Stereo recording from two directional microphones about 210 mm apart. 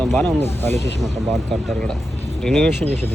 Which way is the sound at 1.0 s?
Centre (ahead or behind).